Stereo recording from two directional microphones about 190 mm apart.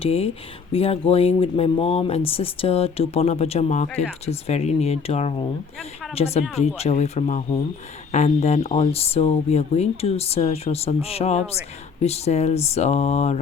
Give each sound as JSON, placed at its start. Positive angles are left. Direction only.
{"t": 0.0, "sound": "speech", "side_deg": 30}